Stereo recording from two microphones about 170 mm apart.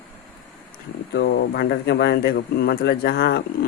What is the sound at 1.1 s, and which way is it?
Speech, 70° left (ahead or behind).